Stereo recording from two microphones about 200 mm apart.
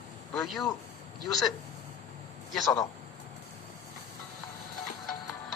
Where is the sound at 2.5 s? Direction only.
Centre (ahead or behind).